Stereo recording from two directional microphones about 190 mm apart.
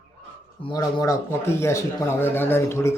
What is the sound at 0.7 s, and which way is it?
Speech, 20° left (ahead or behind).